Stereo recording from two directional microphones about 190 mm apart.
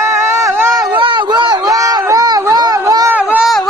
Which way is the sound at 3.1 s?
5° right (ahead or behind).